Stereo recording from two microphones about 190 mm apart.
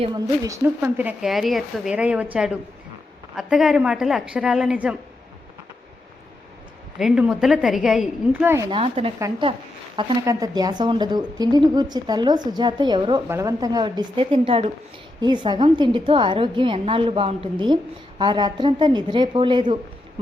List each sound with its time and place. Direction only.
0.0 s a woman's voice: 20° right (ahead or behind)
7.0 s a woman's voice: centre (ahead or behind)
8.8 s a woman's voice: 30° right (ahead or behind)